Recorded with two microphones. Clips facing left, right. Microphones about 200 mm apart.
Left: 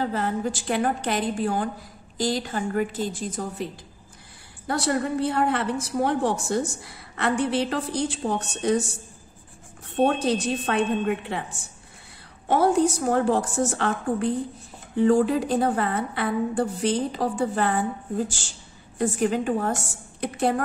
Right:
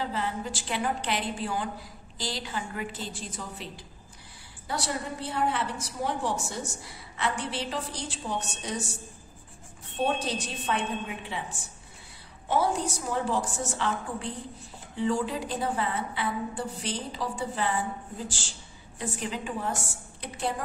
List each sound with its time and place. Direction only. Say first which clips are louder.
0.0 s a woman's voice: left 6 dB; 50° left (ahead or behind)
4.6 s a woman's voice: left 8 dB; 55° left (ahead or behind)
9.9 s a woman's voice: left 7 dB; 55° left (ahead or behind)
12.4 s a woman's voice: left 7 dB; 55° left (ahead or behind)